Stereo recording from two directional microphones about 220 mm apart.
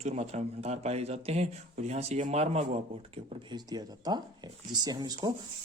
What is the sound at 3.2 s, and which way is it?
Speech, 20° right (ahead or behind).